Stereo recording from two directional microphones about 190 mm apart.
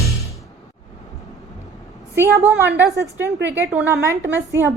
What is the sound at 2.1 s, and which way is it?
A woman's voice, 15° right (ahead or behind).